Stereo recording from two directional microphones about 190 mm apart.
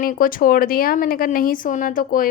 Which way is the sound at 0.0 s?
45° left (ahead or behind).